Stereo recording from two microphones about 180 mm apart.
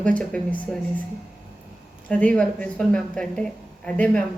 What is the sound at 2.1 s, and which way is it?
A woman's voice, 5° left (ahead or behind).